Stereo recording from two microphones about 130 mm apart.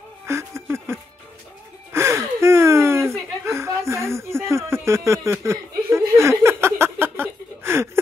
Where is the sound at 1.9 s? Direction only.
20° right (ahead or behind).